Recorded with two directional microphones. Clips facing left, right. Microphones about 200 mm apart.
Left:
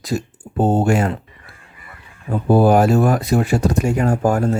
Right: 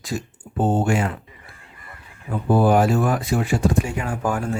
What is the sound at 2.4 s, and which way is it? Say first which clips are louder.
Speech: left 4 dB; 40° left (ahead or behind).